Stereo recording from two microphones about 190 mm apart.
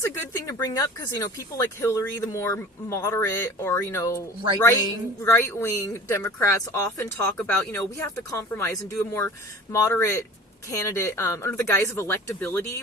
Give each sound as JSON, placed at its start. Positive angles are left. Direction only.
{"t": 0.0, "sound": "speech", "side_deg": 15}